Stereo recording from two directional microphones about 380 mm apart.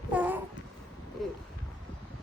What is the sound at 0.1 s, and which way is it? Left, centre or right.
Babbling, centre.